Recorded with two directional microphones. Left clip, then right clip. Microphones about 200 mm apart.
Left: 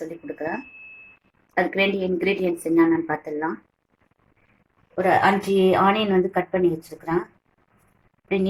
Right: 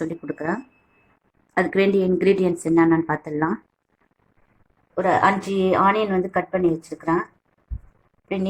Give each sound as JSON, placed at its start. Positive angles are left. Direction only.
{"t": 0.0, "sound": "a sound", "side_deg": -40}
{"t": 1.5, "sound": "a woman's voice", "side_deg": -40}
{"t": 5.0, "sound": "a woman's voice", "side_deg": -25}